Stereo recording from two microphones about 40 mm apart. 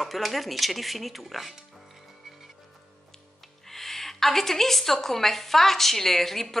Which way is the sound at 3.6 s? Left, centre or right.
Centre.